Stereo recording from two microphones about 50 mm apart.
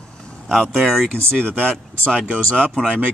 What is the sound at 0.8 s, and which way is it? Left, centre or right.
Speech, centre.